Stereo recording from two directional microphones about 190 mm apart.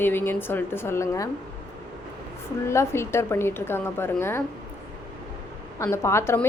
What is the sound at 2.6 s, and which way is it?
A woman's voice, 15° left (ahead or behind).